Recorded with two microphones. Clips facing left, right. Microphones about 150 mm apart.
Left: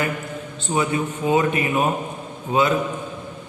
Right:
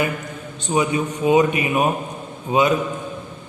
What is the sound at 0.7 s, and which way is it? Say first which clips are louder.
A man's voice: right 2 dB; 20° right (ahead or behind).